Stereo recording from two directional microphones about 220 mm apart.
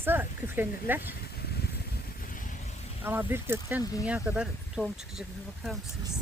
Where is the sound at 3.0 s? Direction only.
10° right (ahead or behind).